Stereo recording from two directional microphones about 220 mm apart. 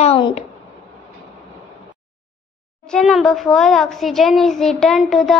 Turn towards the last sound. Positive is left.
turn(degrees=0)  # may be behind; listen again after turning